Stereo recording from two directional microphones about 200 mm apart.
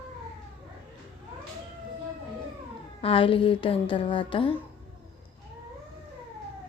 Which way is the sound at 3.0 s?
25° left (ahead or behind).